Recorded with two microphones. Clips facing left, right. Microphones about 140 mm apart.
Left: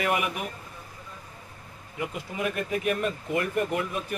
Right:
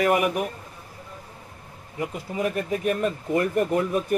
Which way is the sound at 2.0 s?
35° right (ahead or behind).